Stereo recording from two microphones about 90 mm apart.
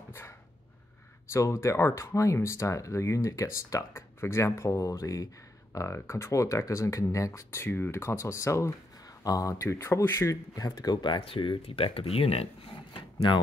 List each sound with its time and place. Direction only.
1.3 s speech: 30° left (ahead or behind); by 13.0 s 90° left